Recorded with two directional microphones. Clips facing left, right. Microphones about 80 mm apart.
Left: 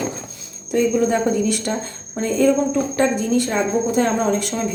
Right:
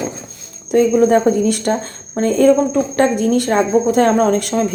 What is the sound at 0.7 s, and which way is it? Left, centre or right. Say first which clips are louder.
Speech: right 6 dB; right.